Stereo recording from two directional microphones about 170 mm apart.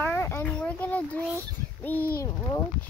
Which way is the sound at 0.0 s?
15° left (ahead or behind).